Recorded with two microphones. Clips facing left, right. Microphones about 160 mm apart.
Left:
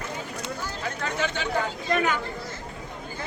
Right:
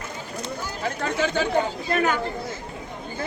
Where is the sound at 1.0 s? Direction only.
40° right (ahead or behind).